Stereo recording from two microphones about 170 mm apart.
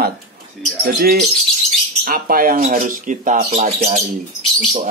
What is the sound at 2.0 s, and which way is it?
Speech, 55° right (ahead or behind).